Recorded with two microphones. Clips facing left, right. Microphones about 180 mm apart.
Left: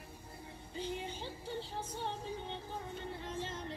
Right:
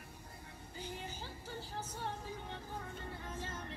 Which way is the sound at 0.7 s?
25° left (ahead or behind).